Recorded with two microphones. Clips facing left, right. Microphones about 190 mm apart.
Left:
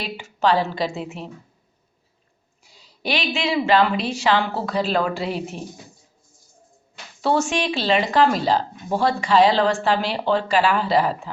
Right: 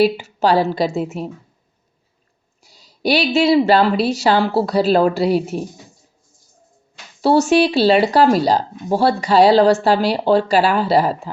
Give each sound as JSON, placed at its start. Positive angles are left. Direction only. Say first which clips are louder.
{"t": 0.0, "sound": "speech", "louder": "right 7 dB", "side_deg": -40}
{"t": 2.6, "sound": "speech", "louder": "right 8 dB", "side_deg": -40}
{"t": 7.2, "sound": "speech", "louder": "right 8 dB", "side_deg": -40}